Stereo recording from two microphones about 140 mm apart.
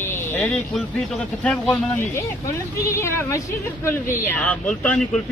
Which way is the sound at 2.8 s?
20° left (ahead or behind).